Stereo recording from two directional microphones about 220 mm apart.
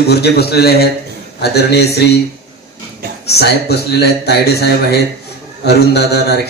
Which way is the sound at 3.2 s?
45° left (ahead or behind).